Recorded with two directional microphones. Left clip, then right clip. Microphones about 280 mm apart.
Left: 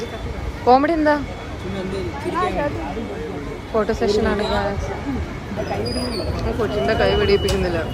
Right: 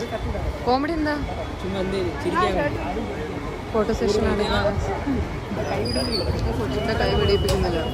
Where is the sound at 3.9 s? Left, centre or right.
Centre.